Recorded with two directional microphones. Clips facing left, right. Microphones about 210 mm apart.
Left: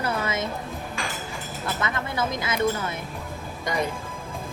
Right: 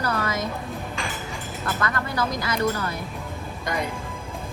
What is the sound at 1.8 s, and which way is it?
Speech, 25° left (ahead or behind).